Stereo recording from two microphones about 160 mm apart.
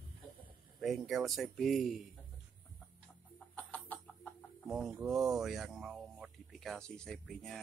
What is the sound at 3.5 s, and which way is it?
Chicken, 10° left (ahead or behind).